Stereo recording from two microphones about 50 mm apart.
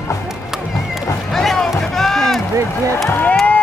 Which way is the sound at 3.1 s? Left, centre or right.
Left.